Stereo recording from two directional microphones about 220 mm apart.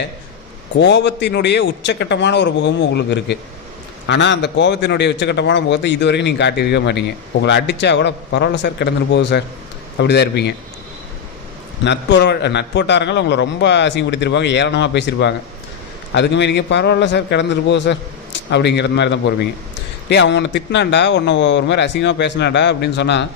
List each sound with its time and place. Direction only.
0.8 s a man's voice: 50° left (ahead or behind)
11.9 s a man's voice: 55° left (ahead or behind)